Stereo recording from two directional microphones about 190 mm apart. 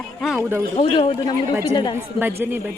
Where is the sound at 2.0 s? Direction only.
10° right (ahead or behind).